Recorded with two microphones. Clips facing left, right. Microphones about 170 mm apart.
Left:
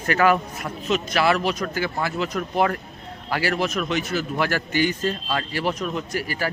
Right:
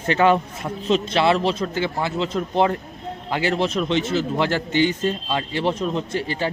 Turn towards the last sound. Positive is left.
turn(degrees=-25)  # may be behind; listen again after turning